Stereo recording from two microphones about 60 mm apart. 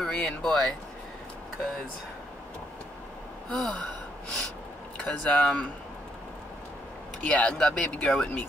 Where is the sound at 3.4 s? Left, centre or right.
Centre.